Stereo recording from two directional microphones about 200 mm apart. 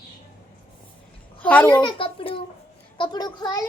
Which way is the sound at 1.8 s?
25° left (ahead or behind).